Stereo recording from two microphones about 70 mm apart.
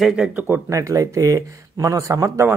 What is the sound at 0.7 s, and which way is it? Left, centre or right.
Speech, right.